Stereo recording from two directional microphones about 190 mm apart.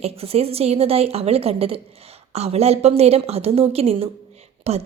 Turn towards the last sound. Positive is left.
turn(degrees=-35)  # may be behind; listen again after turning